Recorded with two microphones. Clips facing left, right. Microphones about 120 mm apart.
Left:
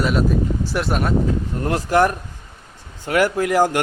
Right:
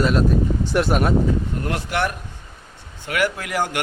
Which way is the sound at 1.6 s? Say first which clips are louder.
Left 6 dB; 35° left (ahead or behind).